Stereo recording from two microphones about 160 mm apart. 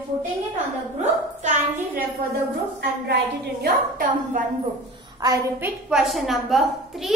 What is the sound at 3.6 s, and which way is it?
Speech, 60° right (ahead or behind).